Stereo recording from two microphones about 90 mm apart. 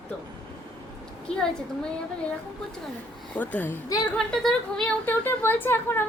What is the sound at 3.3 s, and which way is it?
Speech, 20° left (ahead or behind).